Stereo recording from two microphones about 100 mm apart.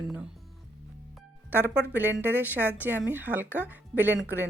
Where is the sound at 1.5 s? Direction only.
20° right (ahead or behind).